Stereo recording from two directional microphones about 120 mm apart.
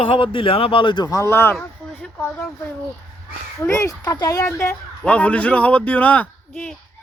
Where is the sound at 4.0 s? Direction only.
30° left (ahead or behind).